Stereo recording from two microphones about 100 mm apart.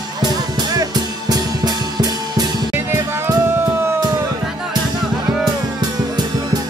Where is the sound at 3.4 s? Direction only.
25° right (ahead or behind).